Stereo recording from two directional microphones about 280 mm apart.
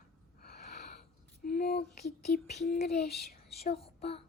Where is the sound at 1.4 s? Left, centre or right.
Left.